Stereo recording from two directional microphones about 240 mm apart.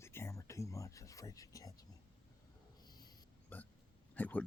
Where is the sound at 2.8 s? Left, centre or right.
Centre.